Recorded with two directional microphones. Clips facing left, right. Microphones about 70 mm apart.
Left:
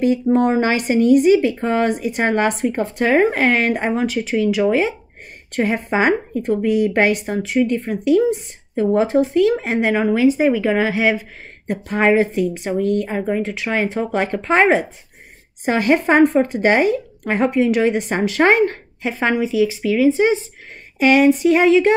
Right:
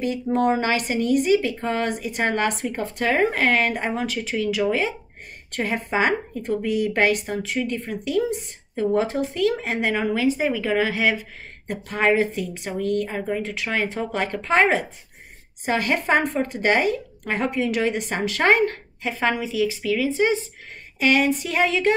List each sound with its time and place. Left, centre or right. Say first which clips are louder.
0.0 s speech: left 6 dB; left